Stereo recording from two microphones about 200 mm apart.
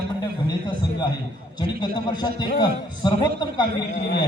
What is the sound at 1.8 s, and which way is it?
A man's voice, 20° left (ahead or behind).